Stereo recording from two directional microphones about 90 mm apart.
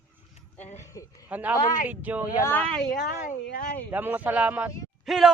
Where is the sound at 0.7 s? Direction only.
35° left (ahead or behind).